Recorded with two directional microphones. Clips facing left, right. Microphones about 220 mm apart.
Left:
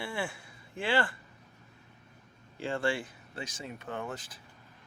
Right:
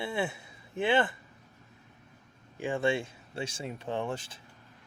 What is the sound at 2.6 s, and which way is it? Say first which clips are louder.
Speech: right 3 dB; 15° right (ahead or behind).